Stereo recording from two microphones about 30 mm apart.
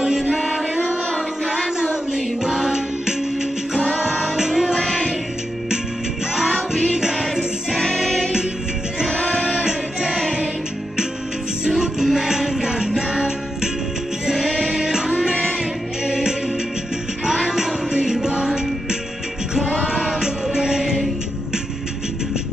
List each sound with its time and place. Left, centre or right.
0.0 s music: right
0.4 s music: centre
2.1 s music: centre
4.7 s music: centre
6.7 s music: centre
9.5 s music: centre
11.8 s music: centre
14.2 s music: centre
16.1 s music: right
17.9 s music: right